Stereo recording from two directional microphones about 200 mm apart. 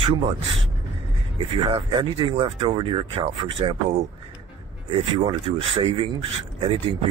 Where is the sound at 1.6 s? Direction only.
30° right (ahead or behind).